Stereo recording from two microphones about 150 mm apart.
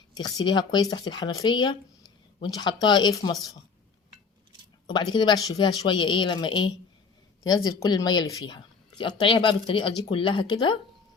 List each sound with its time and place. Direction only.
0.1 s speech: 25° left (ahead or behind)
5.1 s speech: 30° left (ahead or behind)